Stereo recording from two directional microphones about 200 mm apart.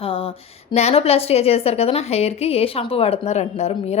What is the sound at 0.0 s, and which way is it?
A woman's voice, 25° left (ahead or behind).